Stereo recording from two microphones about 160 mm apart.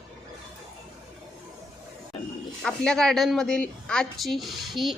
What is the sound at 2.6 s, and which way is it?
A woman's voice, 5° left (ahead or behind).